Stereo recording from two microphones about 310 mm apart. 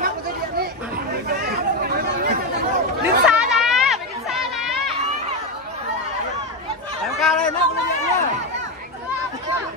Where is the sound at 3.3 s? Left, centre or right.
Centre.